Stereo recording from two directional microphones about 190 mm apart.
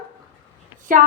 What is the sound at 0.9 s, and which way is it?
Speech, 45° right (ahead or behind).